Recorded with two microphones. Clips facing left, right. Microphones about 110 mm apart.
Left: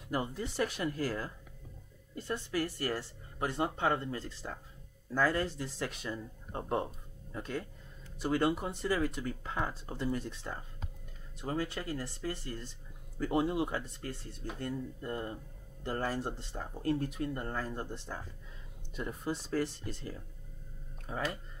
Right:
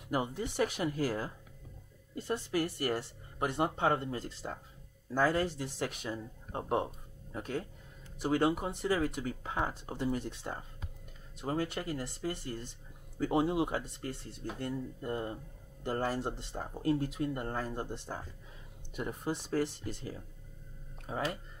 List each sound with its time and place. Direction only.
0.1 s speech: 15° right (ahead or behind)